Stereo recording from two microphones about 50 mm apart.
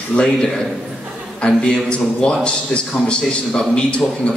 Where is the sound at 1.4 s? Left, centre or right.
Centre.